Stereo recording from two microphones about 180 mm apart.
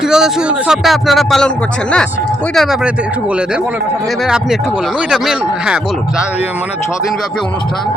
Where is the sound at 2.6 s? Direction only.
Centre (ahead or behind).